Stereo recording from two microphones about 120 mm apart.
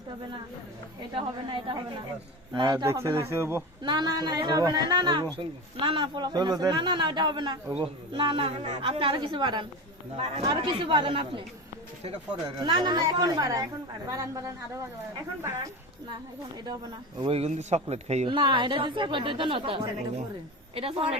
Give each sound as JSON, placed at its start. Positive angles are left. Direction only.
{"t": 1.1, "sound": "a woman's voice", "side_deg": -45}
{"t": 2.8, "sound": "speech", "side_deg": -25}
{"t": 3.8, "sound": "a woman's voice", "side_deg": -35}
{"t": 10.2, "sound": "speech", "side_deg": -60}
{"t": 10.4, "sound": "a woman's voice", "side_deg": -40}
{"t": 12.6, "sound": "speech", "side_deg": -40}
{"t": 17.2, "sound": "a woman's voice", "side_deg": -50}
{"t": 17.5, "sound": "speech", "side_deg": -65}
{"t": 18.3, "sound": "a woman's voice", "side_deg": -45}